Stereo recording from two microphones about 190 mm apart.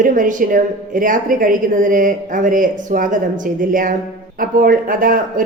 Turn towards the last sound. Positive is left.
turn(degrees=-45)  # may be behind; listen again after turning